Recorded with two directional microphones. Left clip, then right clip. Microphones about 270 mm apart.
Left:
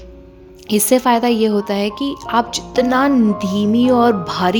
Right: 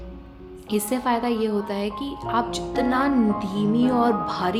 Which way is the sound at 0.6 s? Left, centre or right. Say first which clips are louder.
Left 10 dB; left.